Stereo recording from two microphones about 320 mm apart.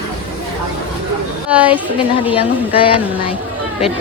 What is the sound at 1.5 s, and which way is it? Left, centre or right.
Speech, centre.